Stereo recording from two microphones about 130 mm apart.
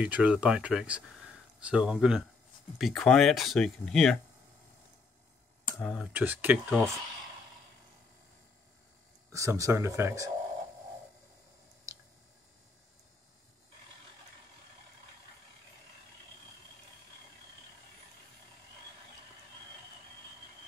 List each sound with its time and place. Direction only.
0.0 s speech: 10° right (ahead or behind)
5.8 s speech: centre (ahead or behind)
6.1 s speech: 15° right (ahead or behind)
9.3 s speech: 25° right (ahead or behind)
11.9 s squish: 25° right (ahead or behind)